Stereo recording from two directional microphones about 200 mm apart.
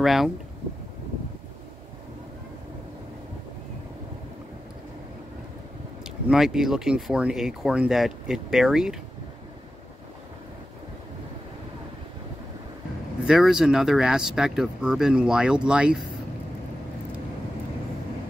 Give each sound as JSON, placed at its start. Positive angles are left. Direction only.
{"t": 0.0, "sound": "speech", "side_deg": 0}
{"t": 6.0, "sound": "speech", "side_deg": -5}
{"t": 13.2, "sound": "speech", "side_deg": -5}